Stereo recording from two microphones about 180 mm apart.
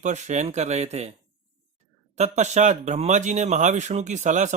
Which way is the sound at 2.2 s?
40° right (ahead or behind).